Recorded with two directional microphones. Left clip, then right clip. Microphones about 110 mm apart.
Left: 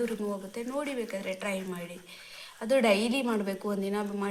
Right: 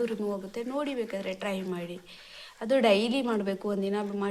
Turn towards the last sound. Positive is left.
turn(degrees=-30)  # may be behind; listen again after turning